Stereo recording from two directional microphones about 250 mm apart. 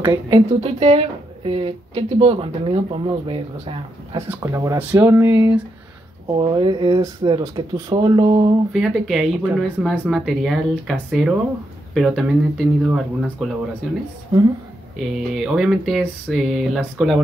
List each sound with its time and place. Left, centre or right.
0.0 s speech: centre
8.7 s speech: centre
15.0 s speech: centre